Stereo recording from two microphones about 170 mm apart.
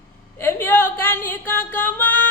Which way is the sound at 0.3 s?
15° left (ahead or behind).